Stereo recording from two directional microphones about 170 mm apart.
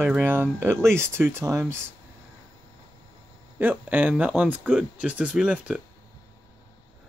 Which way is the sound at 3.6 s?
10° right (ahead or behind).